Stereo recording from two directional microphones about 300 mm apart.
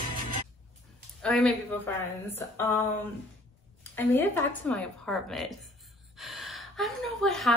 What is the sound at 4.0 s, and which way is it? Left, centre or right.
A woman's voice, centre.